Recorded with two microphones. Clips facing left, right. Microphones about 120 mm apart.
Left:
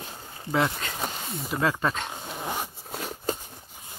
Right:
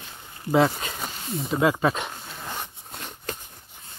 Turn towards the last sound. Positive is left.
turn(degrees=5)  # may be behind; listen again after turning